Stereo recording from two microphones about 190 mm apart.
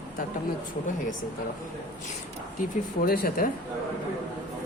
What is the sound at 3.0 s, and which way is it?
Speech, 50° left (ahead or behind).